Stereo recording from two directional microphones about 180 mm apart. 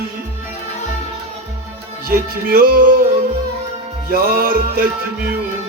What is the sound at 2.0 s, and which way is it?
Music, 55° right (ahead or behind).